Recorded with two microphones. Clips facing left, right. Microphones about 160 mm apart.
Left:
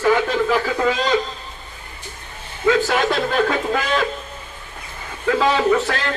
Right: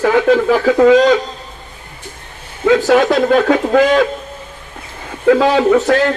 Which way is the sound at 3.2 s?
60° right (ahead or behind).